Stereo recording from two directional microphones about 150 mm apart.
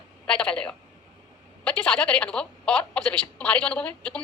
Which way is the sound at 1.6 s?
10° left (ahead or behind).